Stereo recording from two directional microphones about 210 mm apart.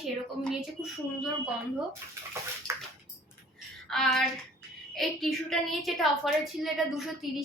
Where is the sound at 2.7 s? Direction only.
15° right (ahead or behind).